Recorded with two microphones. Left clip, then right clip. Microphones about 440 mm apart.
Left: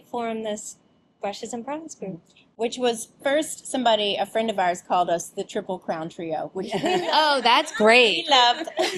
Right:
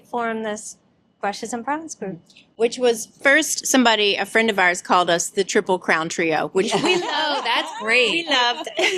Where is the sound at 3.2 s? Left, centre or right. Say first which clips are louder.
Right 7 dB; right.